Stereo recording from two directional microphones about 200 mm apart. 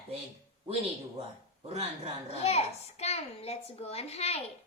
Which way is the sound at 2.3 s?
30° left (ahead or behind).